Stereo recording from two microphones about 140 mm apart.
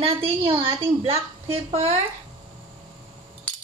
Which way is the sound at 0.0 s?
40° right (ahead or behind).